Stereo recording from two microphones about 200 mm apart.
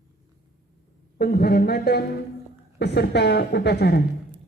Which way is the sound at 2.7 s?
55° left (ahead or behind).